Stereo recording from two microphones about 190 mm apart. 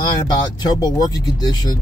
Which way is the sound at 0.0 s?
20° left (ahead or behind).